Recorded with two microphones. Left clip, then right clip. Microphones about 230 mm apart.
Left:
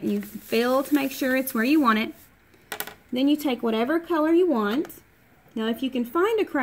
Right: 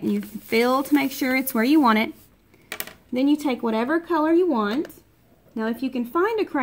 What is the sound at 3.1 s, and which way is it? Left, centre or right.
Speech, centre.